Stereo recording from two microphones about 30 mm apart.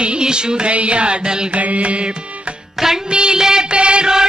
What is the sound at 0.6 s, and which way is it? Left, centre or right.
Music, right.